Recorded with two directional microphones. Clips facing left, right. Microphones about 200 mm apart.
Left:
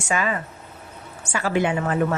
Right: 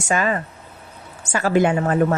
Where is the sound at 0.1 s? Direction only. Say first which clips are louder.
Right 3 dB; 45° right (ahead or behind).